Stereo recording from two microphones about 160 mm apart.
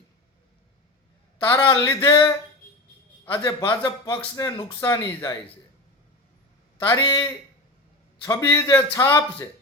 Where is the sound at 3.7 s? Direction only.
20° left (ahead or behind).